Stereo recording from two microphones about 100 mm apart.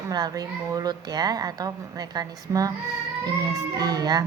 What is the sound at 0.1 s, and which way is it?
A woman's voice, 40° right (ahead or behind).